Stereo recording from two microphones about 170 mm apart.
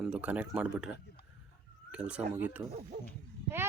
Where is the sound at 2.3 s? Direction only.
10° right (ahead or behind).